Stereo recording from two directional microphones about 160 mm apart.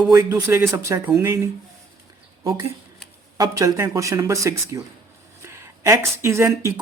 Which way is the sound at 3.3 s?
20° right (ahead or behind).